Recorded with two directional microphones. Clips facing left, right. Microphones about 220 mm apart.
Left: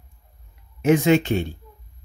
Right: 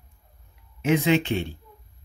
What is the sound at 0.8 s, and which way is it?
Speech, 45° left (ahead or behind).